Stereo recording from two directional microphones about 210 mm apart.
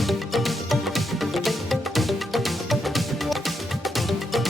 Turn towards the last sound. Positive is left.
turn(degrees=0)  # may be behind; listen again after turning